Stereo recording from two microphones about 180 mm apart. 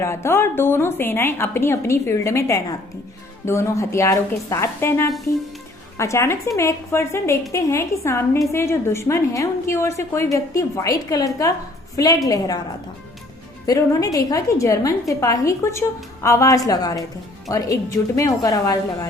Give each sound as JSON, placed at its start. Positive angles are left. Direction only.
{"t": 0.0, "sound": "a woman's voice", "side_deg": 15}
{"t": 13.7, "sound": "a woman's voice", "side_deg": 20}